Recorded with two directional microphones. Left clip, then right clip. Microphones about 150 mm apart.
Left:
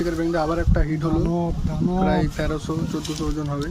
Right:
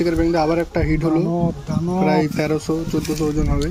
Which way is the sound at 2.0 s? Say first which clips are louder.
Right 6 dB; 15° right (ahead or behind).